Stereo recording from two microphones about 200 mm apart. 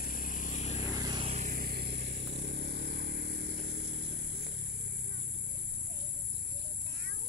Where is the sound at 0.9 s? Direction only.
20° right (ahead or behind); by 4.5 s 60° right (ahead or behind).